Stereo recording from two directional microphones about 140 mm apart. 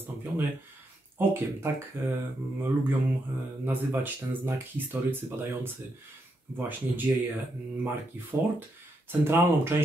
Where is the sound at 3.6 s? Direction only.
15° right (ahead or behind).